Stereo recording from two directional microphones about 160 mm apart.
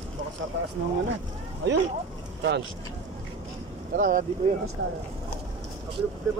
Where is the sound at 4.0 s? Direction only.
55° right (ahead or behind).